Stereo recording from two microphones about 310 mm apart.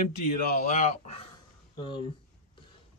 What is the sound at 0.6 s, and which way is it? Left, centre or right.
Speech, left.